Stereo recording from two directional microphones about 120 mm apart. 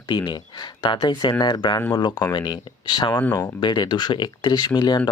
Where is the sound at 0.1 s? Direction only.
40° left (ahead or behind).